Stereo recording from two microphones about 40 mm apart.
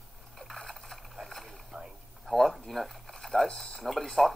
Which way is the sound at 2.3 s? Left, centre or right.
Centre.